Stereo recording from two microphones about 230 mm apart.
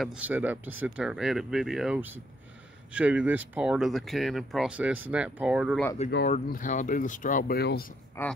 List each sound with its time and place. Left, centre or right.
0.0 s speech: centre
6.2 s speech: left
8.2 s speech: centre